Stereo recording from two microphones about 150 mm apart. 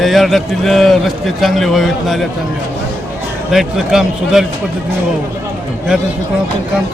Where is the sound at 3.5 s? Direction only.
5° right (ahead or behind).